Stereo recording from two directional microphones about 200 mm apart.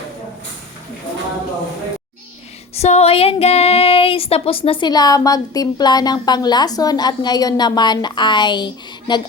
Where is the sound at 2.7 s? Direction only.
30° left (ahead or behind).